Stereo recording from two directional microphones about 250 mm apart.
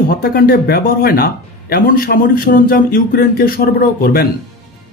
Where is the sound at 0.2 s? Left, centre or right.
Left.